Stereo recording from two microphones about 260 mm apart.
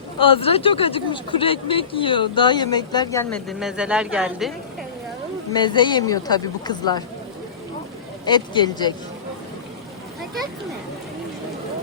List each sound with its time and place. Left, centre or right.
0.2 s speech: left; by 4.5 s centre
5.5 s speech: centre
8.2 s speech: centre